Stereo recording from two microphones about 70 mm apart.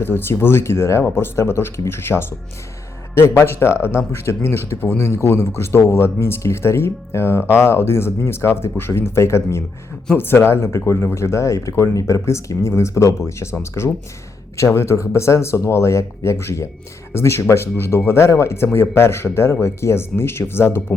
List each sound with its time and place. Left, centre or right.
0.0 s speech: left